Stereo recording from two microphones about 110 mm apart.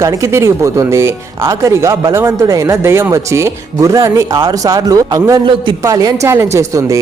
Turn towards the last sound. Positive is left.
turn(degrees=-30)  # may be behind; listen again after turning